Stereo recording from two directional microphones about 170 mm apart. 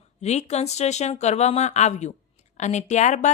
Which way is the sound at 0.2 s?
40° left (ahead or behind).